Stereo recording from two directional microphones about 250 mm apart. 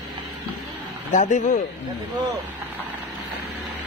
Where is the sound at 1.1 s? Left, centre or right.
Left.